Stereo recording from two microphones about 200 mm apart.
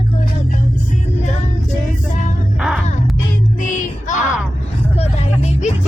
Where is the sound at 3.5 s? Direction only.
40° left (ahead or behind).